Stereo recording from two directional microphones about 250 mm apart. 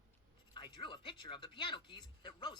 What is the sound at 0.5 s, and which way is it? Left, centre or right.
Speech, centre.